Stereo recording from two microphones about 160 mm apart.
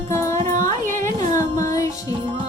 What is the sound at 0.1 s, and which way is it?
Music, 20° left (ahead or behind).